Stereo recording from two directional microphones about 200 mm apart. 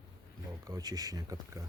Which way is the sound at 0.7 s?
20° right (ahead or behind).